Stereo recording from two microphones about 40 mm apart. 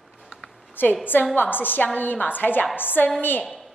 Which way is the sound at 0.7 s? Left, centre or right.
Left.